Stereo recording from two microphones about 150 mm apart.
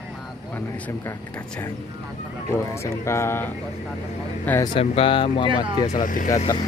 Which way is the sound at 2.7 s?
20° left (ahead or behind).